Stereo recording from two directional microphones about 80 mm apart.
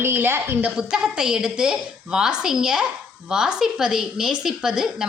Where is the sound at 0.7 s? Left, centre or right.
Centre.